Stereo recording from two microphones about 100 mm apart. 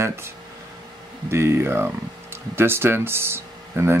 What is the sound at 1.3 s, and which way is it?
Speech, 25° right (ahead or behind).